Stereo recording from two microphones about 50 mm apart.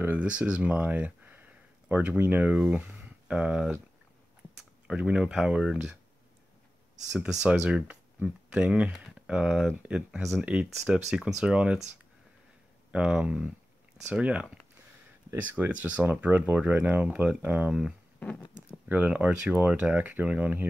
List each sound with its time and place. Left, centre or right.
0.2 s speech: right
4.8 s speech: right
7.1 s speech: right
10.8 s speech: centre
12.9 s speech: right
15.4 s speech: right